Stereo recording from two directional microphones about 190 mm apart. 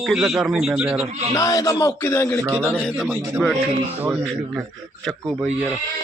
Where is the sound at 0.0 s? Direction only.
Centre (ahead or behind).